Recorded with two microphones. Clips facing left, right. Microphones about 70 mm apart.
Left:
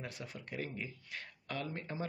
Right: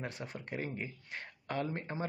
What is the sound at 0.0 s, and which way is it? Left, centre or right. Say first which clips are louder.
Speech: right 4 dB; right.